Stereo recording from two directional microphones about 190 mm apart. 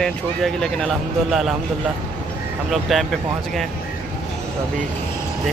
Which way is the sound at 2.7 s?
Centre (ahead or behind).